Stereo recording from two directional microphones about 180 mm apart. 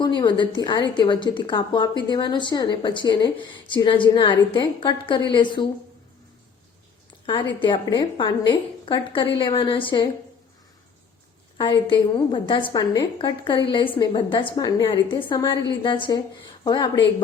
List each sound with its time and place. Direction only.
0.2 s a woman's voice: 25° left (ahead or behind)
7.6 s a woman's voice: 25° left (ahead or behind)
11.5 s a woman's voice: 25° left (ahead or behind)